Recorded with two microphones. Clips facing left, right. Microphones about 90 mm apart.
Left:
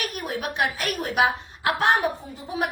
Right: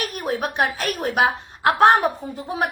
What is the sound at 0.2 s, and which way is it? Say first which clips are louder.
A woman's voice: right 4 dB; 40° right (ahead or behind).